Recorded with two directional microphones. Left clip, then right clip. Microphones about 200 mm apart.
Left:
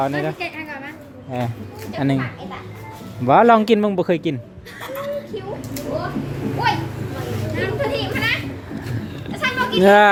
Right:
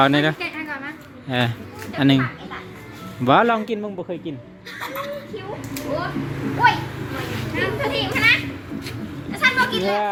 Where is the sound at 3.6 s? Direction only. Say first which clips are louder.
Left 10 dB; 35° left (ahead or behind); by 4.4 s 50° left (ahead or behind).